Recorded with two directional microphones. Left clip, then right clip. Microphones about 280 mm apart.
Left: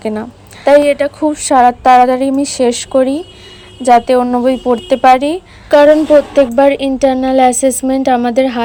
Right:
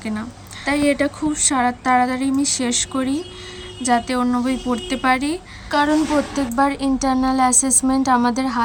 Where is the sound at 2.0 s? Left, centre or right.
Centre.